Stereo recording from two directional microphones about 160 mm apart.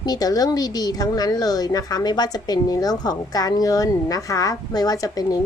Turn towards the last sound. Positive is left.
turn(degrees=20)  # may be behind; listen again after turning